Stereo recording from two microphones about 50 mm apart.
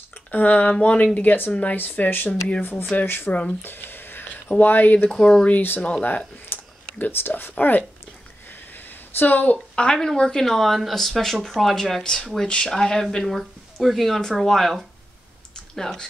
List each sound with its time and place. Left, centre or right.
0.3 s speech: left
1.8 s speech: left
3.6 s a sound: left
4.6 s speech: left
5.1 s speech: centre
5.6 s speech: left
8.5 s a sound: left
9.8 s speech: centre
10.4 s speech: centre